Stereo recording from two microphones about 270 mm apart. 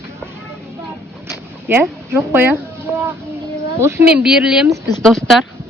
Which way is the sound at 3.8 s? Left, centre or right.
Centre.